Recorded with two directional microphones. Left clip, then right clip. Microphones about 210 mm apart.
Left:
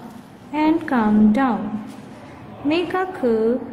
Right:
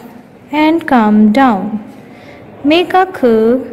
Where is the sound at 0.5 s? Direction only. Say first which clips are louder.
Right 9 dB; 35° right (ahead or behind).